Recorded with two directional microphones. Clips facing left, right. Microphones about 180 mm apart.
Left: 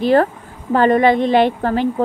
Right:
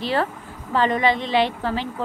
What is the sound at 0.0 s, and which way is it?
Speech, 50° left (ahead or behind).